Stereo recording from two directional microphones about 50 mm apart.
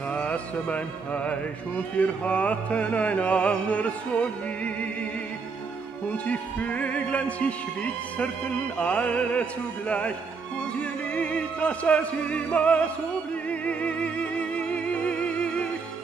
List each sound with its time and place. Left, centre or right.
0.1 s music: left
6.2 s music: left